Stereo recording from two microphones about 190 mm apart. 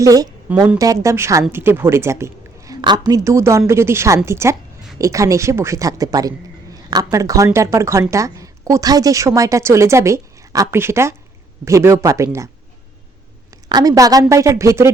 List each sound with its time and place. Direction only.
0.0 s a woman's voice: 20° right (ahead or behind)
13.7 s a woman's voice: 20° right (ahead or behind)